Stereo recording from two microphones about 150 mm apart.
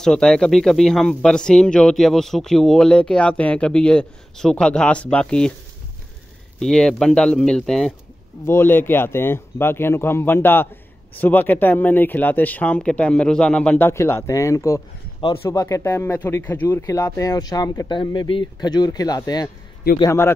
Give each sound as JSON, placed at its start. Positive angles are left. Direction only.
{"t": 0.0, "sound": "speech", "side_deg": 5}
{"t": 6.6, "sound": "speech", "side_deg": 5}
{"t": 8.5, "sound": "speech", "side_deg": 15}